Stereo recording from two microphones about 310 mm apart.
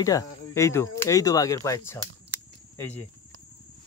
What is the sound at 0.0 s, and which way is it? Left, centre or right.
Speech, centre.